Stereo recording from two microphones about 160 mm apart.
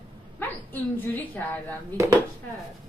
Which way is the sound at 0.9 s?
10° left (ahead or behind).